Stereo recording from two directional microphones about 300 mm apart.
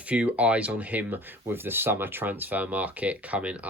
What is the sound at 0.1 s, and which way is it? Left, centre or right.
Speech, centre.